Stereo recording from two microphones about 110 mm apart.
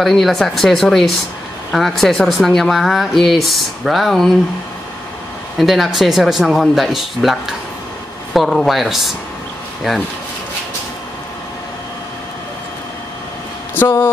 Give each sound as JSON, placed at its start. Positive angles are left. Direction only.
{"t": 0.0, "sound": "speech", "side_deg": 0}
{"t": 5.6, "sound": "speech", "side_deg": 0}
{"t": 13.7, "sound": "speech", "side_deg": 20}